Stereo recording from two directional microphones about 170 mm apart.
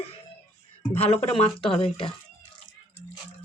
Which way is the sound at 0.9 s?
35° left (ahead or behind).